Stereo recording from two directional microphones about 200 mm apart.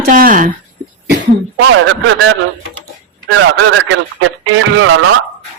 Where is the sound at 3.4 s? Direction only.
70° right (ahead or behind).